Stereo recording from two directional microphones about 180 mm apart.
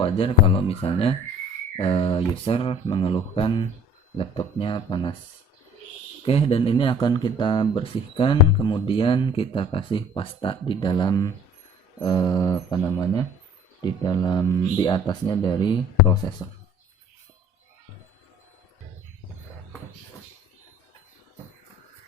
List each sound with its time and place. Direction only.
0.0 s speech: 30° left (ahead or behind)
6.2 s speech: 30° left (ahead or behind)